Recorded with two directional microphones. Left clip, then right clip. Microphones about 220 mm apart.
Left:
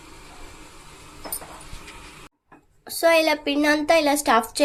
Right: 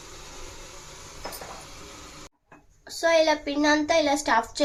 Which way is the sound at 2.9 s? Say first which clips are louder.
Left 3 dB; 40° left (ahead or behind).